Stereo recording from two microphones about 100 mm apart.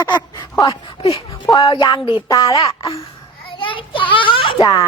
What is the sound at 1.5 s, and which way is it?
Speech, 60° left (ahead or behind).